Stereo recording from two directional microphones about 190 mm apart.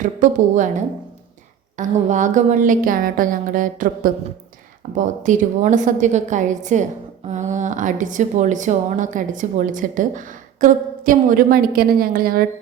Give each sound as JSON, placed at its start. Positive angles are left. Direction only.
{"t": 0.0, "sound": "a woman's voice", "side_deg": -40}
{"t": 1.8, "sound": "a woman's voice", "side_deg": -40}